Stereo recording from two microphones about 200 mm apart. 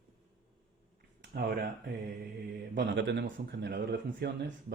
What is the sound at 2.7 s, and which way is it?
Speech, 60° right (ahead or behind).